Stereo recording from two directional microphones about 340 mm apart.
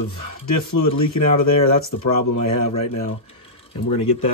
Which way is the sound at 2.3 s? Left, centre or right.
Left.